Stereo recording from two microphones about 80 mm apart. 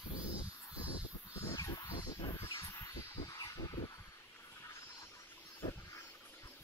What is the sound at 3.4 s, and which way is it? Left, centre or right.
Vehicle, left.